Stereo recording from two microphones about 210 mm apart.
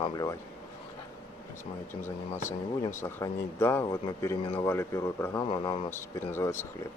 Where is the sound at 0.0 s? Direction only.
15° left (ahead or behind).